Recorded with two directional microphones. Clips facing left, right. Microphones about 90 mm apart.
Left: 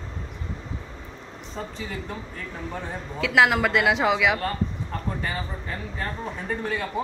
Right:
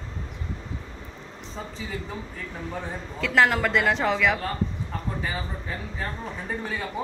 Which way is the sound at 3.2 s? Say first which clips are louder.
Left 1 dB; 5° left (ahead or behind).